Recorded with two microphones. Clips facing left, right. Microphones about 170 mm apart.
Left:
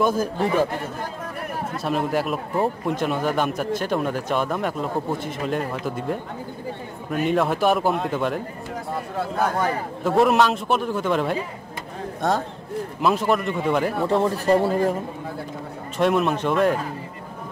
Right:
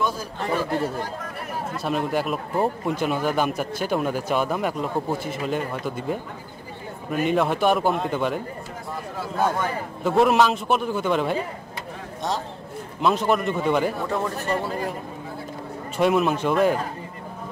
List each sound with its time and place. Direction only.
0.0 s speech: 50° left (ahead or behind)
1.8 s speech: centre (ahead or behind)
10.0 s speech: centre (ahead or behind)
13.0 s speech: centre (ahead or behind)
14.0 s a man's voice: 30° left (ahead or behind)
16.0 s speech: centre (ahead or behind)